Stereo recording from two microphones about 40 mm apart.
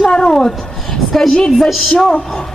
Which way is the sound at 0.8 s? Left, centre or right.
Centre.